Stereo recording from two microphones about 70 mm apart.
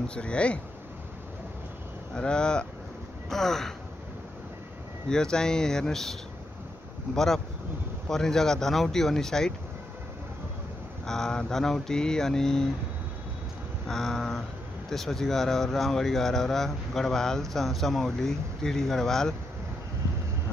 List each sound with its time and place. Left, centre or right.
0.1 s speech: centre
2.1 s speech: centre
5.1 s speech: centre
7.2 s speech: centre
11.1 s speech: centre
13.8 s speech: centre